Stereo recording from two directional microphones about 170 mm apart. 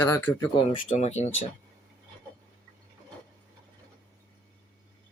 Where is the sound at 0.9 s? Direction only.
40° left (ahead or behind).